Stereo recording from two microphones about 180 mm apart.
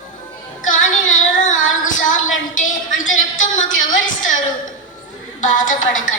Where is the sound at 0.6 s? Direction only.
45° left (ahead or behind).